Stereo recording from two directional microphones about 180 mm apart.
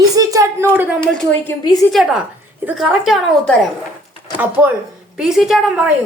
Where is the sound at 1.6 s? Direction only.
20° left (ahead or behind).